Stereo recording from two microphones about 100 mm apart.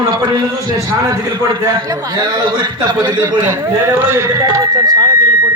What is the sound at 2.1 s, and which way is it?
Speech, 45° right (ahead or behind).